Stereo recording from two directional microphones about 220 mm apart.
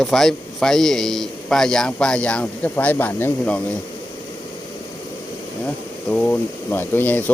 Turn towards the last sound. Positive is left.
turn(degrees=10)  # may be behind; listen again after turning